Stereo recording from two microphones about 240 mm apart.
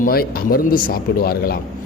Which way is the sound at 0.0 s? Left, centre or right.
Left.